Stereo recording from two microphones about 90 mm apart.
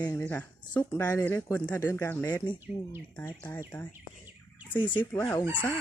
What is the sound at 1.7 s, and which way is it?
Speech, 25° left (ahead or behind).